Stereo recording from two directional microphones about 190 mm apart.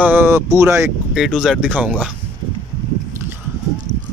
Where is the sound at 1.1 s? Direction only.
Centre (ahead or behind).